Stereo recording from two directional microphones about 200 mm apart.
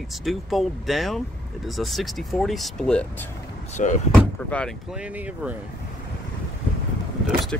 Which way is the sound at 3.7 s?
35° left (ahead or behind).